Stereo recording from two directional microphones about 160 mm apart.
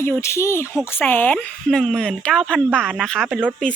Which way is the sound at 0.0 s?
15° left (ahead or behind).